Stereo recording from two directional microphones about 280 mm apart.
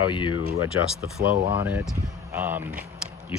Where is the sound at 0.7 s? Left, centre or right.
Left.